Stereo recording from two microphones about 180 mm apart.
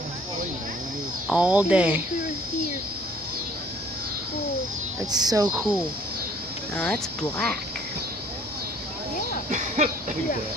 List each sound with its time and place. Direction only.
1.2 s speech: 5° right (ahead or behind)
5.1 s speech: 20° right (ahead or behind)
6.7 s speech: 5° left (ahead or behind)
9.5 s a sound: 45° right (ahead or behind)